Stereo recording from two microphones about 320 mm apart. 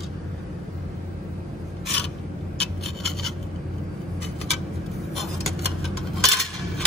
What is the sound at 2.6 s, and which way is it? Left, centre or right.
Rub, centre.